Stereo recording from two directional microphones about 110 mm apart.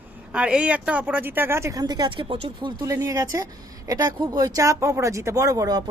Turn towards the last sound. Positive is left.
turn(degrees=-35)  # may be behind; listen again after turning